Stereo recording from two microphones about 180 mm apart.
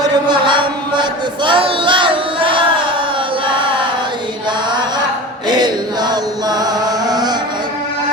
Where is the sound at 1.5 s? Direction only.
30° right (ahead or behind).